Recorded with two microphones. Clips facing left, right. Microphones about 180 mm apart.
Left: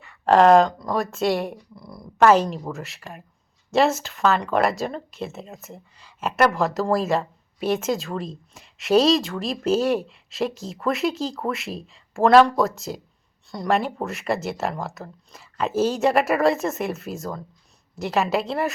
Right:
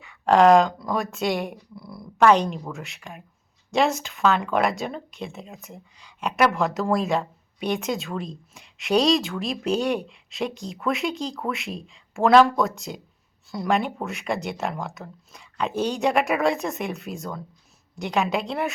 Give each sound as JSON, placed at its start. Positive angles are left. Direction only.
{"t": 0.0, "sound": "speech", "side_deg": 0}
{"t": 1.7, "sound": "a sound", "side_deg": 20}
{"t": 2.1, "sound": "speech", "side_deg": 5}